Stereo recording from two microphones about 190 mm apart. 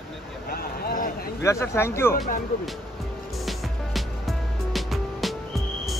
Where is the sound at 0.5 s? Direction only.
50° left (ahead or behind).